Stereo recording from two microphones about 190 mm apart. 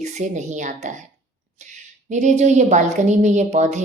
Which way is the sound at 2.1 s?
40° right (ahead or behind).